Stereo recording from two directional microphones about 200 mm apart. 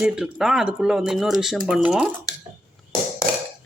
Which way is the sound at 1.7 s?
5° right (ahead or behind).